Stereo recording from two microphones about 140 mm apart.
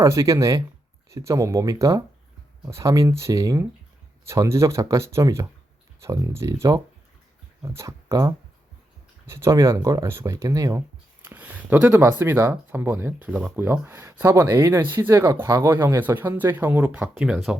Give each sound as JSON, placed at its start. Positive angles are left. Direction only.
{"t": 0.0, "sound": "speech", "side_deg": -20}
{"t": 11.2, "sound": "speech", "side_deg": -15}